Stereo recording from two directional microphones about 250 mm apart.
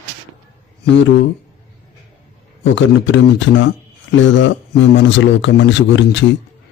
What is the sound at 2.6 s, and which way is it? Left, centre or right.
Speech, left.